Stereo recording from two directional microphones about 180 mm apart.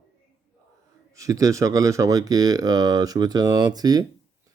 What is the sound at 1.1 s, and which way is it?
Speech, 15° right (ahead or behind).